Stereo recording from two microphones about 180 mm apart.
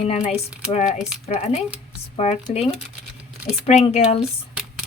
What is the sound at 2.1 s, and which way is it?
Speech, 35° left (ahead or behind).